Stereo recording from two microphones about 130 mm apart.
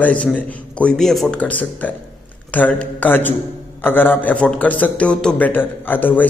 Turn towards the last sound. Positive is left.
turn(degrees=15)  # may be behind; listen again after turning